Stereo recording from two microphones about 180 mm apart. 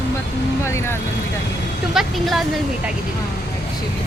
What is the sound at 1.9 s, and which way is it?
Speech, centre (ahead or behind).